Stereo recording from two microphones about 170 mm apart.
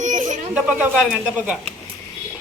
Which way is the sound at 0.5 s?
5° right (ahead or behind).